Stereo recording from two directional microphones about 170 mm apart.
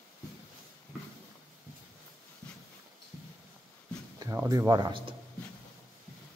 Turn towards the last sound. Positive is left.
turn(degrees=-30)  # may be behind; listen again after turning